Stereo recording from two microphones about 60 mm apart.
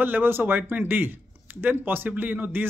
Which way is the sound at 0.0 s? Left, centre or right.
Right.